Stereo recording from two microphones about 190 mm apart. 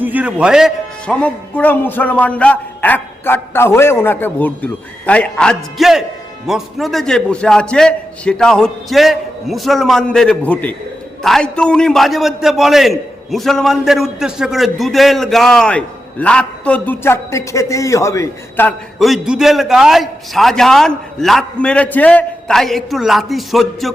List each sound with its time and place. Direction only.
0.0 s a man's voice: 10° right (ahead or behind); by 18.7 s 15° left (ahead or behind)
18.9 s a man's voice: centre (ahead or behind)